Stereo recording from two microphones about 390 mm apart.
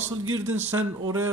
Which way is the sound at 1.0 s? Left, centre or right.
Centre.